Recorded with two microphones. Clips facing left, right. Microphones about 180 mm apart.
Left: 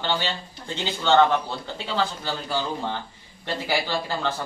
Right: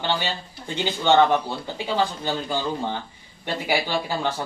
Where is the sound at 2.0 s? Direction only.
15° right (ahead or behind).